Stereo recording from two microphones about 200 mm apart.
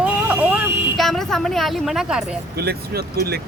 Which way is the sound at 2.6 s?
50° right (ahead or behind).